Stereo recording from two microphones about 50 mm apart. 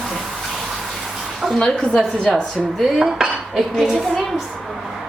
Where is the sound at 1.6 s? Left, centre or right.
Centre.